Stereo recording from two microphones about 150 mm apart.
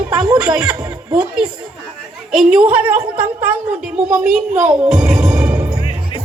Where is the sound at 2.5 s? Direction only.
10° right (ahead or behind).